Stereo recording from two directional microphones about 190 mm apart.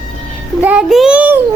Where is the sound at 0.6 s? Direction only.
5° right (ahead or behind).